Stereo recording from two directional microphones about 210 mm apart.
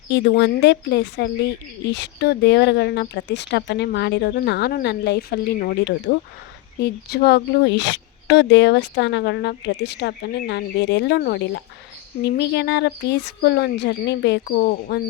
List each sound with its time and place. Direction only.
0.1 s speech: 55° left (ahead or behind)